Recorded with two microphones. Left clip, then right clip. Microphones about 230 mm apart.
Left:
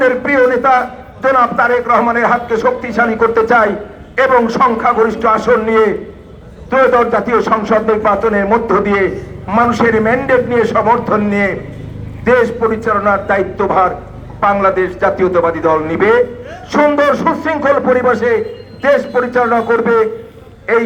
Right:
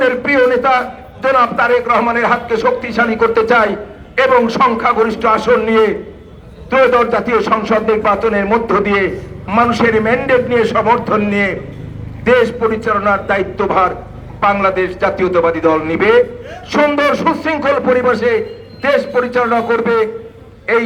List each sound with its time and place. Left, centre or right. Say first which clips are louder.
0.0 s a man's voice: left 1 dB; right